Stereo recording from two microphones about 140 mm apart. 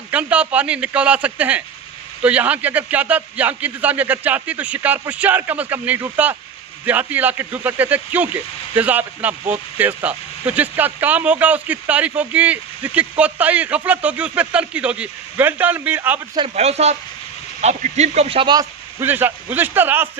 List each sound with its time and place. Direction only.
0.1 s speech: 10° right (ahead or behind)
16.6 s speech: 50° right (ahead or behind)
18.9 s speech: 15° right (ahead or behind)